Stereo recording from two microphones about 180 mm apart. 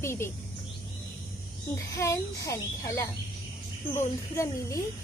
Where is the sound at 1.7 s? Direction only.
15° left (ahead or behind).